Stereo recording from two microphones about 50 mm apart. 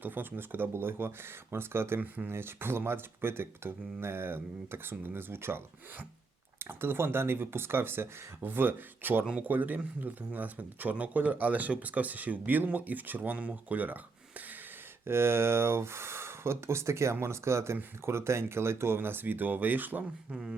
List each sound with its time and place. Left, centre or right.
0.0 s speech: right
2.0 s speech: right
2.3 s speech: right
8.4 s speech: right
15.0 s speech: right
18.9 s speech: right
20.3 s speech: centre